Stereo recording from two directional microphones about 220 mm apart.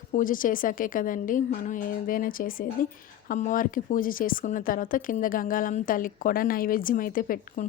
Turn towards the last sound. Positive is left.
turn(degrees=40)  # may be behind; listen again after turning